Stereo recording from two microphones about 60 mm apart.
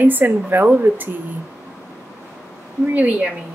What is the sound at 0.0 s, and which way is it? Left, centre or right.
Speech, right.